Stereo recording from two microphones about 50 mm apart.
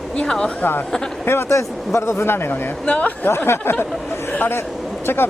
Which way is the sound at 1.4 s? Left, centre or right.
Left.